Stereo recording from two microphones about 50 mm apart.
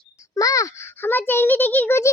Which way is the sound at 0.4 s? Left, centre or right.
Left.